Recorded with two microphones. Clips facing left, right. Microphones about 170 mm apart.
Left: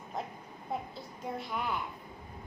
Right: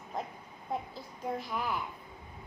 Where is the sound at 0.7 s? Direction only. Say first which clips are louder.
Right 1 dB; 5° left (ahead or behind).